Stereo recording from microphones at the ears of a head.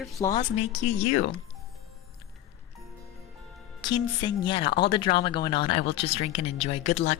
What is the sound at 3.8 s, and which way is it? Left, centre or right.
A woman's voice, left.